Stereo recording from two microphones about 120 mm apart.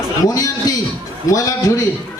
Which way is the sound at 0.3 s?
30° left (ahead or behind).